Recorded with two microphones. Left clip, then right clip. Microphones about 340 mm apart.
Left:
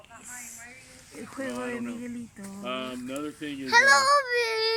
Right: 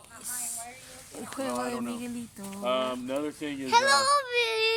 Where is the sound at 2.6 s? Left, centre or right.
Centre.